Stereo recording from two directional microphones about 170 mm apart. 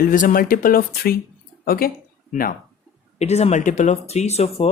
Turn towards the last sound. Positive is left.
turn(degrees=40)  # may be behind; listen again after turning